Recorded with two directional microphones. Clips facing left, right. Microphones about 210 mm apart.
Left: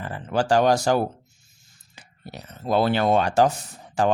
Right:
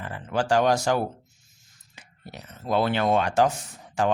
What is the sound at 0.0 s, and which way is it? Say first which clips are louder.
Speech: left 3 dB; 35° left (ahead or behind).